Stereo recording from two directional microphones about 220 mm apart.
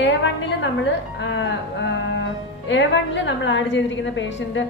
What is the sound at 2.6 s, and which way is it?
A woman's voice, 55° left (ahead or behind).